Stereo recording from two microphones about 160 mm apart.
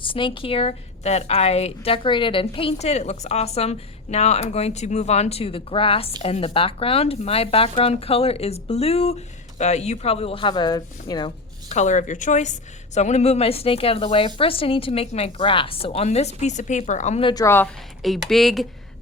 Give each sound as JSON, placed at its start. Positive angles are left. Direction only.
{"t": 0.0, "sound": "speech", "side_deg": 30}
{"t": 11.7, "sound": "speech", "side_deg": 50}
{"t": 17.2, "sound": "a woman's voice", "side_deg": 20}
{"t": 18.0, "sound": "speech", "side_deg": 0}